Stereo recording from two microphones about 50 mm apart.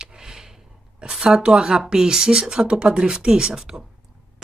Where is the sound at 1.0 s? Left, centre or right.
Centre.